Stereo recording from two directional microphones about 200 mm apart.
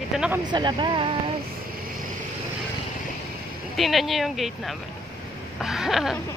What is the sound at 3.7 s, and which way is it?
Speech, centre (ahead or behind).